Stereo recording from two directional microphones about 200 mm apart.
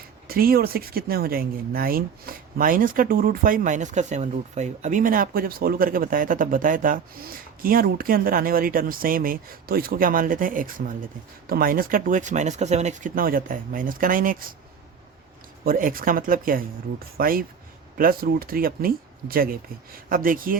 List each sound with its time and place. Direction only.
0.3 s speech: 50° right (ahead or behind)
15.6 s speech: 45° right (ahead or behind)